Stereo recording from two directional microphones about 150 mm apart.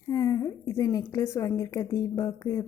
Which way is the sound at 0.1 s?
25° left (ahead or behind).